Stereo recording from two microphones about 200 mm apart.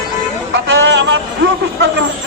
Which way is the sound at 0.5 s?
65° right (ahead or behind).